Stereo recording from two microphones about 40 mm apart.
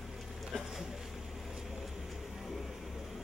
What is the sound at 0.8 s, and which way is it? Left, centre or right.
Vehicle, centre.